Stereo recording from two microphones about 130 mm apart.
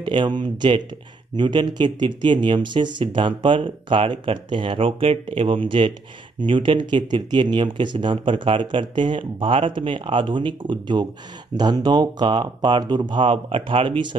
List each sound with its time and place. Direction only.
0.0 s speech: 40° right (ahead or behind)